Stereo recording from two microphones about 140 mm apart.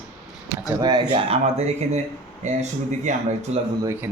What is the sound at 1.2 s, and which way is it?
Speech, 45° right (ahead or behind).